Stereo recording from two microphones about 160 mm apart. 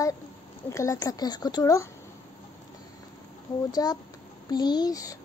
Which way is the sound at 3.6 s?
25° left (ahead or behind).